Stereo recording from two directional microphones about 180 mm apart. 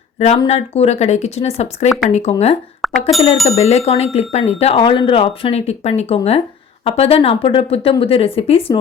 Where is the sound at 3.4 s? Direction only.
35° left (ahead or behind).